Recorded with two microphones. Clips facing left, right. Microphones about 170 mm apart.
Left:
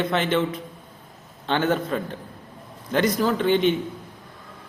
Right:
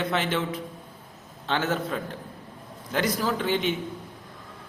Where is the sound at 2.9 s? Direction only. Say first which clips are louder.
Left 5 dB; 10° right (ahead or behind).